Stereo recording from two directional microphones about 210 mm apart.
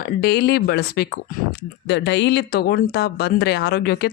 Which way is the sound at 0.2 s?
50° left (ahead or behind).